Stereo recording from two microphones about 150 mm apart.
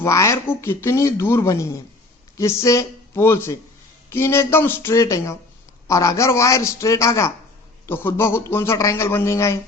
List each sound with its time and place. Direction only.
0.0 s a man's voice: 20° left (ahead or behind)